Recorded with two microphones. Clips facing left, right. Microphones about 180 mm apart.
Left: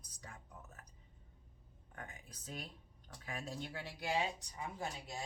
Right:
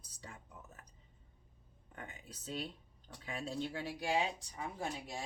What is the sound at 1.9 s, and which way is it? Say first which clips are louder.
Speech: right 2 dB; 25° right (ahead or behind).